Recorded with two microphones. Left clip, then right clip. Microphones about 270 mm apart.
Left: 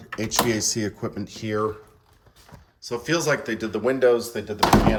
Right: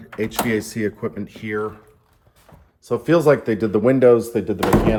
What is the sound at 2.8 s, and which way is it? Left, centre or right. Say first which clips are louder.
Speech: right 8 dB; centre.